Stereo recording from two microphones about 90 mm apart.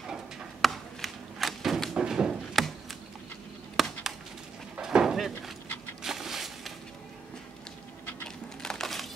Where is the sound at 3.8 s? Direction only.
Centre (ahead or behind).